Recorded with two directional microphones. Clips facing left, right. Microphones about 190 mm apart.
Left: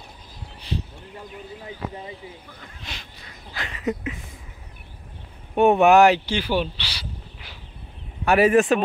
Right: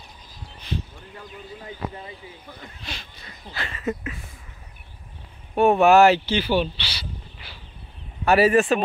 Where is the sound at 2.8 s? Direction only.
15° left (ahead or behind).